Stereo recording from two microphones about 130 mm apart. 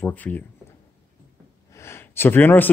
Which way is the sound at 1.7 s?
20° left (ahead or behind).